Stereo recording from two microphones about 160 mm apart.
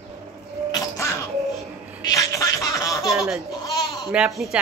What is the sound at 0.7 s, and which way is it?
Music, 20° left (ahead or behind).